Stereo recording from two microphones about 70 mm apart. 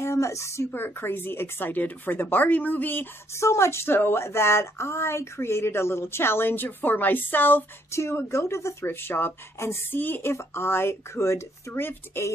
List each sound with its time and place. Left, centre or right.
0.0 s speech: left
0.7 s speech: left
3.3 s speech: left
7.9 s speech: left